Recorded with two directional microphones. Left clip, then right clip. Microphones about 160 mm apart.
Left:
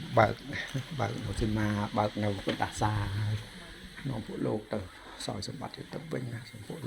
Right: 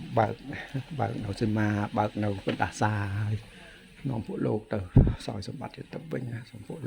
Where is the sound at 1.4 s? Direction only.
65° right (ahead or behind).